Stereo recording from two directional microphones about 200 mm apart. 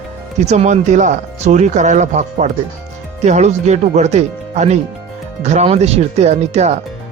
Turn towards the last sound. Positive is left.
turn(degrees=-35)  # may be behind; listen again after turning